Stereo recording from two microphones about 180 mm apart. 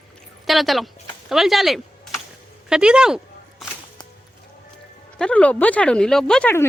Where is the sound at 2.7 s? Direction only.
5° right (ahead or behind).